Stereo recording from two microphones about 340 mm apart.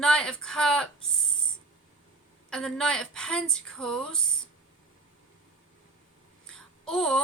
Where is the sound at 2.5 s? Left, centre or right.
Centre.